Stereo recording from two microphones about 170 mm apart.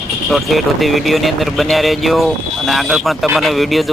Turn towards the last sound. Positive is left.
turn(degrees=0)  # may be behind; listen again after turning